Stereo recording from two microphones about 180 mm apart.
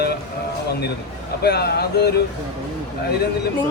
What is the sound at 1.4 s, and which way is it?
Speech, 65° left (ahead or behind).